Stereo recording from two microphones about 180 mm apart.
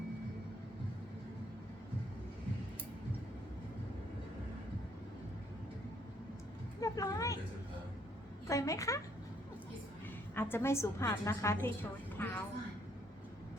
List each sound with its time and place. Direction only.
6.7 s speech: 20° left (ahead or behind)
8.4 s a woman's voice: 15° left (ahead or behind)
10.3 s a woman's voice: 10° left (ahead or behind)